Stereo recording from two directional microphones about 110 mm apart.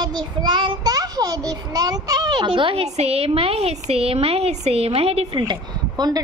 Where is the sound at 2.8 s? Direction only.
75° right (ahead or behind).